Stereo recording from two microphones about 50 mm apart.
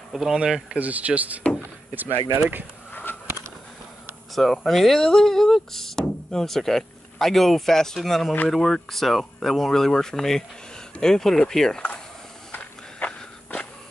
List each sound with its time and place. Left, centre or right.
0.1 s speech: centre
0.7 s speech: right
2.9 s a sound: left
4.4 s speech: centre
12.5 s walk: left